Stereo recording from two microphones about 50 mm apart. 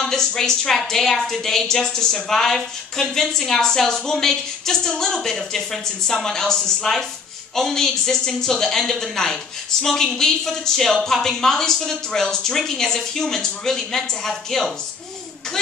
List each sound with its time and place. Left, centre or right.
0.0 s a woman's voice: centre